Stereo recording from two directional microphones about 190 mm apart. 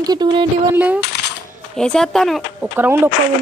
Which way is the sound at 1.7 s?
5° left (ahead or behind).